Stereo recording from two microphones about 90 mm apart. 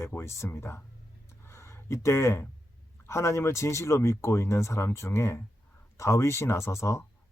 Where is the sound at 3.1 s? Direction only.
30° left (ahead or behind).